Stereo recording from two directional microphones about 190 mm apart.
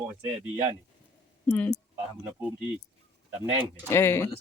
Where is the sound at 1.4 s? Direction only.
10° left (ahead or behind).